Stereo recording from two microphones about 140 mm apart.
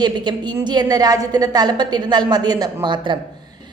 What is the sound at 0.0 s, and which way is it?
A woman's voice, 30° right (ahead or behind).